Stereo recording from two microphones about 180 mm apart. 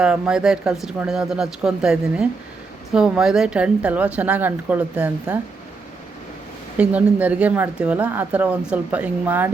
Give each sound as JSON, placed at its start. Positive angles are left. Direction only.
{"t": 0.0, "sound": "a woman's voice", "side_deg": -5}
{"t": 6.7, "sound": "a woman's voice", "side_deg": -10}